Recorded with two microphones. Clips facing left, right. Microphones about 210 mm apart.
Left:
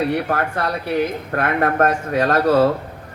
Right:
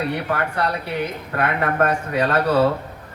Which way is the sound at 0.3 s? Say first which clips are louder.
Left 1 dB; 45° left (ahead or behind).